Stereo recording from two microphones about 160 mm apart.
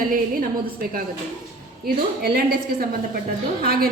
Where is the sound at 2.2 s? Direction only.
75° right (ahead or behind).